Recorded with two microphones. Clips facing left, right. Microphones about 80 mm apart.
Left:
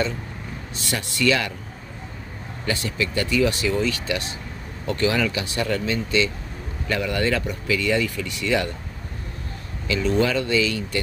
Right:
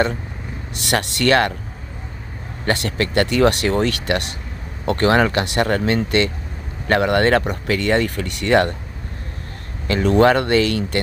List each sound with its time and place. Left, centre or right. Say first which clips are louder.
0.8 s speech: right 4 dB; right
2.6 s speech: right 5 dB; right
9.8 s speech: right 7 dB; right